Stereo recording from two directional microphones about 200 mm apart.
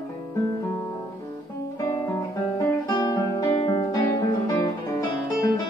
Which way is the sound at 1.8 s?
10° left (ahead or behind).